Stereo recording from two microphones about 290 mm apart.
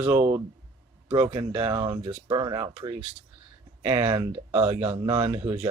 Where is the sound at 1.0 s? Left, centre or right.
Centre.